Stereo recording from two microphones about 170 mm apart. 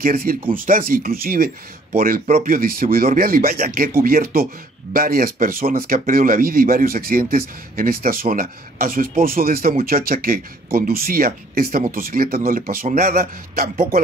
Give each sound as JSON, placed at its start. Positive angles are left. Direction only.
{"t": 0.0, "sound": "speech", "side_deg": -55}